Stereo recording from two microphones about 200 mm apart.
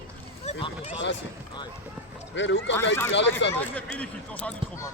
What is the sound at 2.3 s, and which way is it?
Speech, 65° left (ahead or behind).